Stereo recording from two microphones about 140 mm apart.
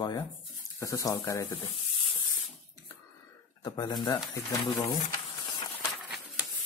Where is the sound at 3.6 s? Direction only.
30° left (ahead or behind).